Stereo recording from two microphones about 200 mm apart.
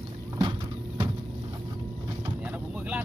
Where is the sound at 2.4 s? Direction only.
5° right (ahead or behind).